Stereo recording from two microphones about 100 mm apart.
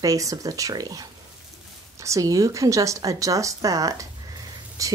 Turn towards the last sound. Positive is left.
turn(degrees=-35)  # may be behind; listen again after turning